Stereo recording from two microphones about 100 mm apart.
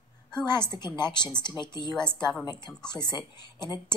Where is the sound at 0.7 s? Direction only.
45° left (ahead or behind).